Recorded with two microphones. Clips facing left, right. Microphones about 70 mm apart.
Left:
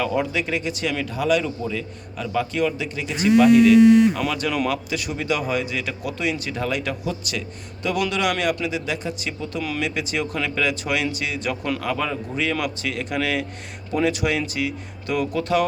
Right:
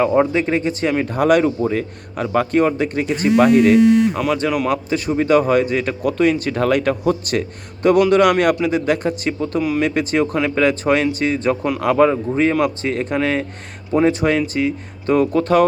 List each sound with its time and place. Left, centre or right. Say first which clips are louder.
0.0 s speech: right 8 dB; right
4.2 s speech: right 5 dB; right
4.7 s a man's voice: right 7 dB; right